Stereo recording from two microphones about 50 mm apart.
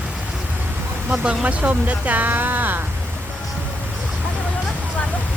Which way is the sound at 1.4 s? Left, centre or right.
Right.